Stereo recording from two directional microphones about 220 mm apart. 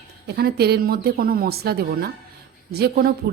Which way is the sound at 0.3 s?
45° right (ahead or behind).